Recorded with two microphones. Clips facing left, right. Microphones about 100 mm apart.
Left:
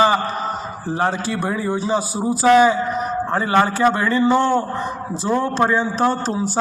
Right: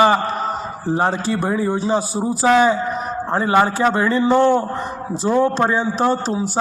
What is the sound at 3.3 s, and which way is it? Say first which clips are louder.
A man's voice: right 2 dB; 15° right (ahead or behind).